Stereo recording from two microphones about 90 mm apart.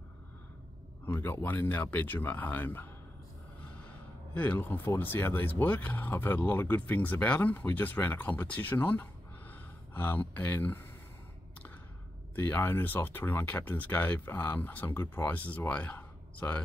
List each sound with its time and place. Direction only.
1.0 s speech: 25° left (ahead or behind)
4.3 s speech: 20° left (ahead or behind)
12.4 s speech: 20° left (ahead or behind)